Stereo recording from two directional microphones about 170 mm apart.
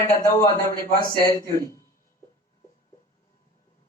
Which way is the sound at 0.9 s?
55° left (ahead or behind).